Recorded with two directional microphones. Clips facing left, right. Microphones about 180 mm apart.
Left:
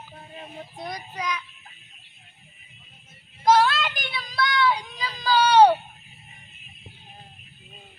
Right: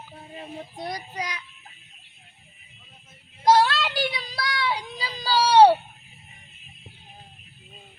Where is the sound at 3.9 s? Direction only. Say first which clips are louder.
Right 6 dB; 35° right (ahead or behind).